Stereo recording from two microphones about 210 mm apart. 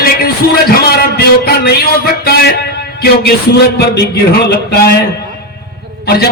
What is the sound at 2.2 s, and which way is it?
A man's voice, 50° left (ahead or behind).